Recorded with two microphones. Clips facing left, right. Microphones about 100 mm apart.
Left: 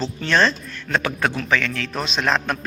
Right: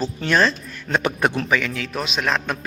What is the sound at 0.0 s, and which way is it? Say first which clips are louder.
Speech: even; 10° right (ahead or behind).